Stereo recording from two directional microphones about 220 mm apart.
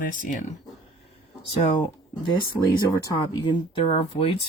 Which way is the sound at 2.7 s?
20° left (ahead or behind).